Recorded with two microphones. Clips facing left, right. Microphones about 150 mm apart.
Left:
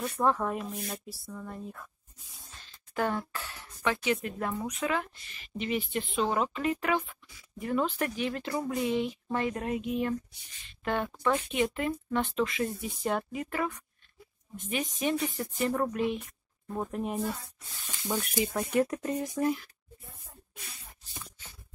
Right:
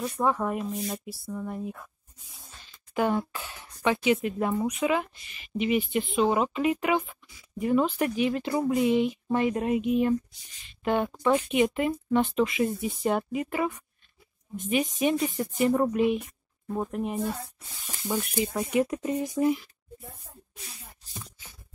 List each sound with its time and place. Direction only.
0.0 s speech: 5° right (ahead or behind)
15.1 s speech: 25° right (ahead or behind)